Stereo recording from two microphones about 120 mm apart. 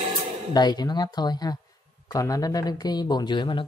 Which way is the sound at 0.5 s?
35° left (ahead or behind).